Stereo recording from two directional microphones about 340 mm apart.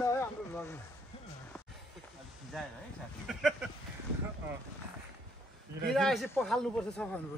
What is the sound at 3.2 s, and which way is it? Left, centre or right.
Speech, centre.